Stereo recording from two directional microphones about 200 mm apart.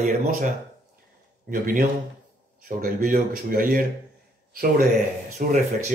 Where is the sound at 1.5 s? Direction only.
45° right (ahead or behind).